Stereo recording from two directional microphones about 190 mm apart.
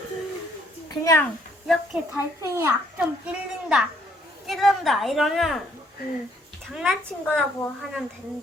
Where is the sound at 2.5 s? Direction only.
15° right (ahead or behind).